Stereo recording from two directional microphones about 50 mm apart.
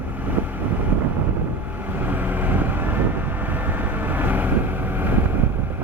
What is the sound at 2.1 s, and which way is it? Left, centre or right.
Vehicle, right.